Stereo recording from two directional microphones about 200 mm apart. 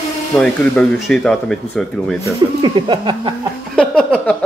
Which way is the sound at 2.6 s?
25° right (ahead or behind).